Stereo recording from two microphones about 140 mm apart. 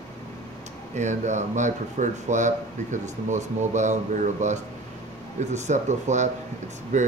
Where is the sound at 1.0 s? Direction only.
60° right (ahead or behind).